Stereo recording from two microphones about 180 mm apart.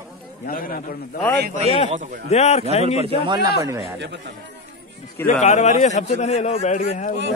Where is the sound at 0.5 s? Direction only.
50° left (ahead or behind).